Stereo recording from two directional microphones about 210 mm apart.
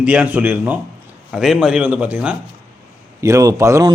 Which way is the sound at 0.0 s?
5° right (ahead or behind).